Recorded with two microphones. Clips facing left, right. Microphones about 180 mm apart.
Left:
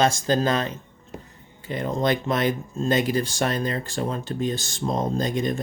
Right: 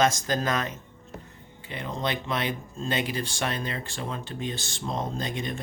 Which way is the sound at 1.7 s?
45° left (ahead or behind).